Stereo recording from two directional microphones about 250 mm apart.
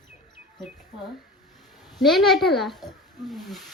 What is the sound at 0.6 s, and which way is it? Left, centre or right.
Speech, centre.